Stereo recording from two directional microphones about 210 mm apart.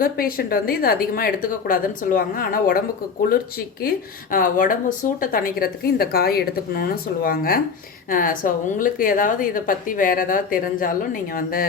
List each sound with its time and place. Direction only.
0.0 s speech: 45° left (ahead or behind)